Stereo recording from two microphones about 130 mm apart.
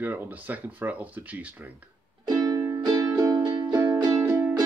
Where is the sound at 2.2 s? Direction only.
30° right (ahead or behind).